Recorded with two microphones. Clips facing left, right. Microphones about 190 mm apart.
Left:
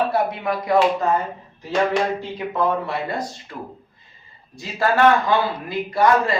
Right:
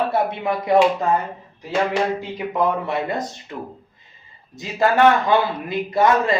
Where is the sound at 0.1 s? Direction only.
25° right (ahead or behind).